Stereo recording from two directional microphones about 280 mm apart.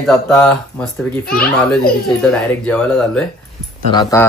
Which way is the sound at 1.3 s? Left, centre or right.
Left.